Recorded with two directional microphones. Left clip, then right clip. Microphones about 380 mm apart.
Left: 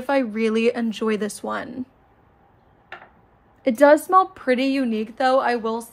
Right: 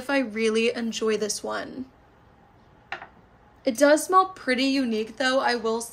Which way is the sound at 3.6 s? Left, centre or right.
Centre.